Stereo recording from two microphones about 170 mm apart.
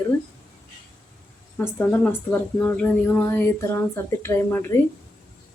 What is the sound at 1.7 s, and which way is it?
Speech, 10° left (ahead or behind).